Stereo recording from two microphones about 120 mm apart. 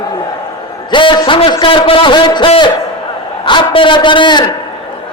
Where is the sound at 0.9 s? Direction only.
40° left (ahead or behind).